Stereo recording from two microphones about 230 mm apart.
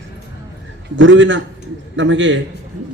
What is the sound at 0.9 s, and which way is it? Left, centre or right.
Speech, right.